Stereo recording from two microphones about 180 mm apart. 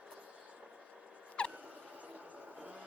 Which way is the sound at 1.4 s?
5° left (ahead or behind).